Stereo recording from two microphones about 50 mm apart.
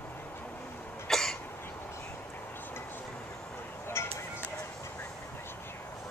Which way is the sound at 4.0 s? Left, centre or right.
Left.